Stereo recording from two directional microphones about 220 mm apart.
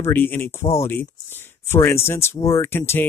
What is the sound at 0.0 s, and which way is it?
Speech, 10° left (ahead or behind).